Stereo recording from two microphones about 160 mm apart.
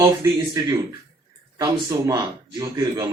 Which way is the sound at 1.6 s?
20° right (ahead or behind).